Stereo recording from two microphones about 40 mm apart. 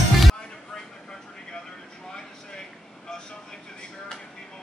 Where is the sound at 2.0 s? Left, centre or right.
Centre.